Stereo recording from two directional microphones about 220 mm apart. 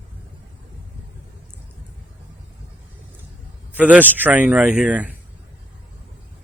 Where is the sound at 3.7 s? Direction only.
5° right (ahead or behind).